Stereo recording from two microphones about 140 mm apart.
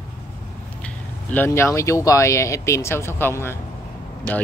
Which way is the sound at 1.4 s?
20° left (ahead or behind).